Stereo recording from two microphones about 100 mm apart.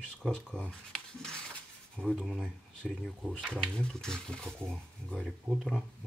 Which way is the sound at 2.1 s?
5° right (ahead or behind).